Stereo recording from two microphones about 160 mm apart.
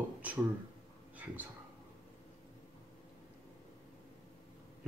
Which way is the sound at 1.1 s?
10° right (ahead or behind).